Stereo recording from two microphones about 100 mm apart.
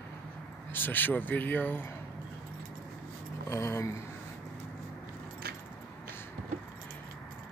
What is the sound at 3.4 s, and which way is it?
Speech, 25° left (ahead or behind).